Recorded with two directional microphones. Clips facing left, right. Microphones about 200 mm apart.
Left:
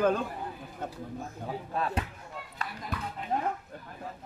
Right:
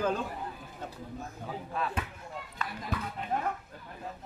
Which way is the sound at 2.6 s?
35° left (ahead or behind).